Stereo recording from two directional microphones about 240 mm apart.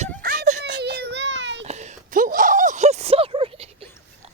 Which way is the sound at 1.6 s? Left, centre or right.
Right.